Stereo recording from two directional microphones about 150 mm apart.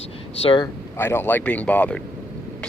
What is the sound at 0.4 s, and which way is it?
Speech, 35° left (ahead or behind).